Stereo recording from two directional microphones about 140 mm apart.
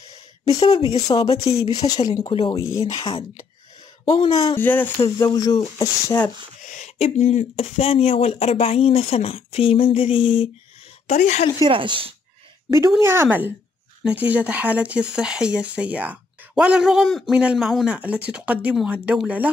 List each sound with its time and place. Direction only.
0.6 s speech: 45° left (ahead or behind)
1.4 s speech: 25° left (ahead or behind)
2.3 s speech: 40° left (ahead or behind)
4.6 s speech: 15° left (ahead or behind)
5.2 s speech: 25° left (ahead or behind)
6.6 s a sound: 65° left (ahead or behind)
7.0 s speech: 55° left (ahead or behind)
11.1 s speech: 55° left (ahead or behind)
11.6 s speech: 35° right (ahead or behind)
13.0 s speech: 15° right (ahead or behind)